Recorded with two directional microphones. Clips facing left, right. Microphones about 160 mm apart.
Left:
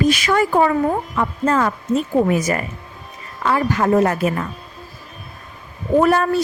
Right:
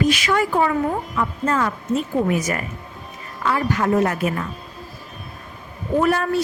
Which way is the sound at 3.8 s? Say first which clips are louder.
Left 4 dB; 35° left (ahead or behind).